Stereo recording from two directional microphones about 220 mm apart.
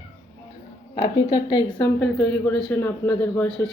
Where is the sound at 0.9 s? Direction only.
20° left (ahead or behind).